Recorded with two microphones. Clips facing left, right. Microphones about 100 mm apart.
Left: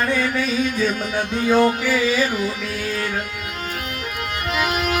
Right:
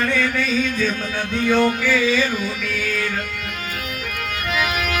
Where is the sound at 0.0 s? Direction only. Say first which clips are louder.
Even; 25° left (ahead or behind).